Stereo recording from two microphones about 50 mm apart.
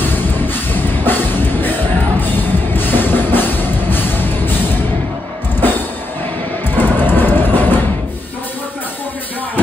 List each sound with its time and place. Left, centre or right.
0.0 s music: left